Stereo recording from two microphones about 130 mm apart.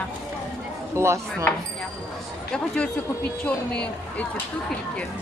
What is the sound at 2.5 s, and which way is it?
Speech, 10° left (ahead or behind).